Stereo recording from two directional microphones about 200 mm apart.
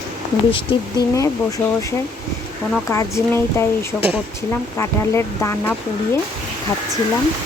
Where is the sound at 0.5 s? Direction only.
20° left (ahead or behind).